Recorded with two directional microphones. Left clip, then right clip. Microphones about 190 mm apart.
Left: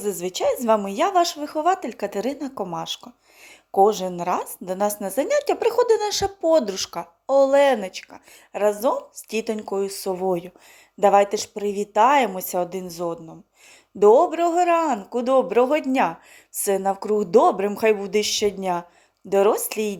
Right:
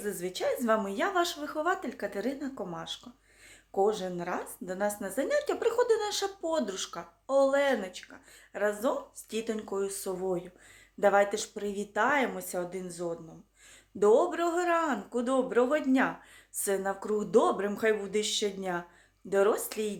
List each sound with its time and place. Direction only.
0.0 s a man's voice: 30° left (ahead or behind)